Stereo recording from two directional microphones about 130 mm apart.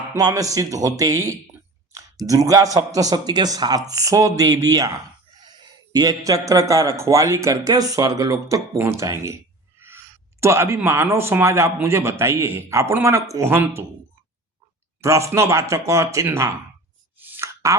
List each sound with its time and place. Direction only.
0.2 s a man's voice: 30° right (ahead or behind)
15.0 s a man's voice: 20° right (ahead or behind)
17.2 s plop: 15° right (ahead or behind)